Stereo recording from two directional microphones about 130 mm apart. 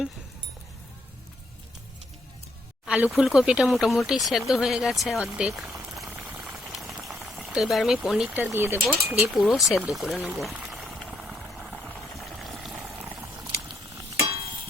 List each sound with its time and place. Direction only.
2.8 s speech: 10° right (ahead or behind)
6.1 s boiling: 15° right (ahead or behind)
6.4 s boiling: centre (ahead or behind)
8.3 s speech: 15° right (ahead or behind)
9.5 s speech: centre (ahead or behind)
10.5 s a sound: 5° right (ahead or behind)
13.0 s a sound: 20° right (ahead or behind)